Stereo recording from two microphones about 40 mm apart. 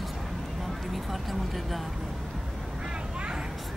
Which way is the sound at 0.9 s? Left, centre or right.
Centre.